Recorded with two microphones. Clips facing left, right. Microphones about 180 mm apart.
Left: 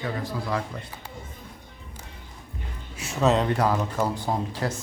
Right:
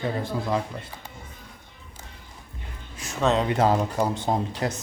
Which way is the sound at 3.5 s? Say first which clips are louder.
Right 2 dB; 20° right (ahead or behind).